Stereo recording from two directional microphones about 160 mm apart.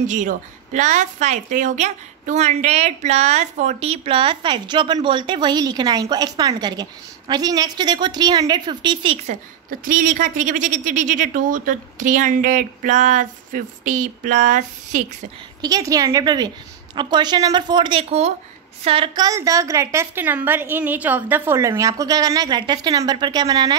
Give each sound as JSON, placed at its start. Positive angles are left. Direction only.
{"t": 0.0, "sound": "a woman's voice", "side_deg": -55}
{"t": 9.7, "sound": "speech", "side_deg": -55}
{"t": 15.6, "sound": "a woman's voice", "side_deg": -20}
{"t": 19.2, "sound": "a woman's voice", "side_deg": -20}